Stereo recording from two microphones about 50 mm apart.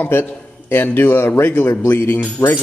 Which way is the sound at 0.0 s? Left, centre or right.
Left.